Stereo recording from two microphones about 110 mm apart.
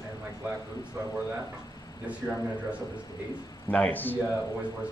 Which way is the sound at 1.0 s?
25° right (ahead or behind).